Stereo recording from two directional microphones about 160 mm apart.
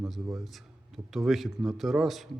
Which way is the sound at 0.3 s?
Centre (ahead or behind).